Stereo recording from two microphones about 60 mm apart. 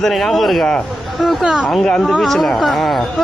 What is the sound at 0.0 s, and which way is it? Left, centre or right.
Speech, centre.